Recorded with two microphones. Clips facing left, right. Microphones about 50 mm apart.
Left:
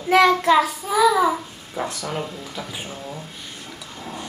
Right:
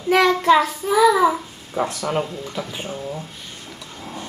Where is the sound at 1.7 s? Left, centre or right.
Right.